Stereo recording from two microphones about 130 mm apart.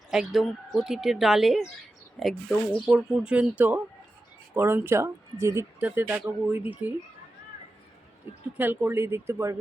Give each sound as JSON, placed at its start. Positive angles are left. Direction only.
{"t": 0.1, "sound": "speech", "side_deg": 0}
{"t": 8.5, "sound": "speech", "side_deg": -15}